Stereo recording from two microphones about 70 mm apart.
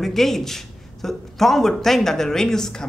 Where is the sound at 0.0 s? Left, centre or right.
Centre.